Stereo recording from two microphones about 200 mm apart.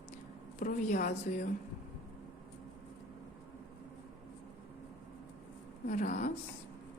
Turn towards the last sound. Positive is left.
turn(degrees=35)  # may be behind; listen again after turning